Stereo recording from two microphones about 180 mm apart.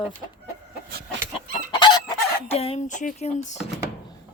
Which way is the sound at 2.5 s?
35° left (ahead or behind).